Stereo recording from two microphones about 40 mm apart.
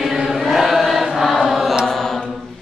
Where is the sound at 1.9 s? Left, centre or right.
Centre.